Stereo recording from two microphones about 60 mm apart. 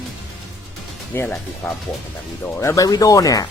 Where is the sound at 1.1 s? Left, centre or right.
Left.